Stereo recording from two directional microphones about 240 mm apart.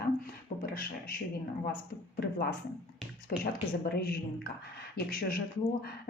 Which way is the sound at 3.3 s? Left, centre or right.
Left.